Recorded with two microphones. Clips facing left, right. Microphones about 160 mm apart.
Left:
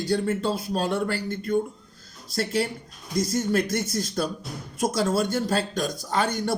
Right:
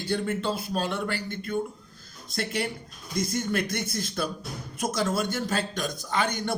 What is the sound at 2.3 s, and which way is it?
A man's voice, 35° left (ahead or behind).